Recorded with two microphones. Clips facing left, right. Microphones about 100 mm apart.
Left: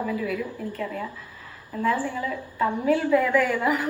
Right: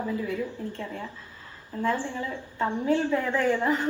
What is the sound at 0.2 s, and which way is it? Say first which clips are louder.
Speech: left 2 dB; 25° right (ahead or behind).